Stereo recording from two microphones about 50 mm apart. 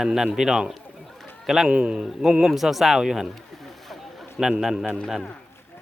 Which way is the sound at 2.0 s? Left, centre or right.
Centre.